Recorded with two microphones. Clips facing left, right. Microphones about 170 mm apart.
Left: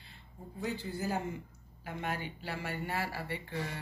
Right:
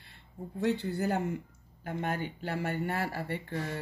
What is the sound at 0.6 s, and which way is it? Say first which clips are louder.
Speech: right 7 dB; 70° right (ahead or behind).